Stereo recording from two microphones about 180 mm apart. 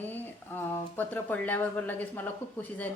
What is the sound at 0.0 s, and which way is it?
A woman's voice, 10° left (ahead or behind).